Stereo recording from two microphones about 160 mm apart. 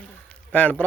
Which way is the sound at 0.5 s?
10° left (ahead or behind).